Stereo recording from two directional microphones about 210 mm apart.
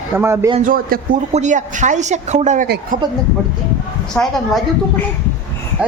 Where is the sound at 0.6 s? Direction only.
40° right (ahead or behind).